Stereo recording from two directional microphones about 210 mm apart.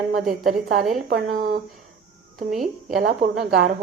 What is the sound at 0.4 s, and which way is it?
A woman's voice, 40° right (ahead or behind).